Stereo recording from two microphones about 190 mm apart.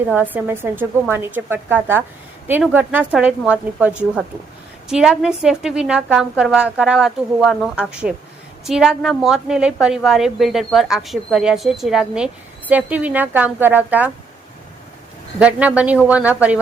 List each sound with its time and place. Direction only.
0.1 s a woman's voice: 10° right (ahead or behind)
15.4 s a woman's voice: 5° right (ahead or behind)